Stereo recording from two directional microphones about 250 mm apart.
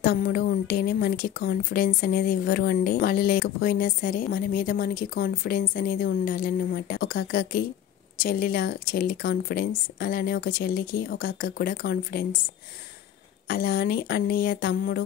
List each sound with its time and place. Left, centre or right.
0.0 s a woman's voice: left
13.5 s a woman's voice: left